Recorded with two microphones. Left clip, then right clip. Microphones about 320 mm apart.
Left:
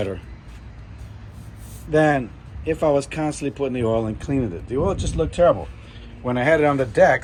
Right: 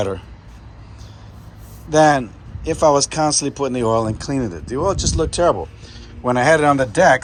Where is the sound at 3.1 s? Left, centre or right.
Right.